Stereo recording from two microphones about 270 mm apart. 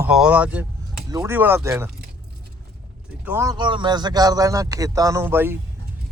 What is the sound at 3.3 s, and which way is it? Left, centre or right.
Speech, centre.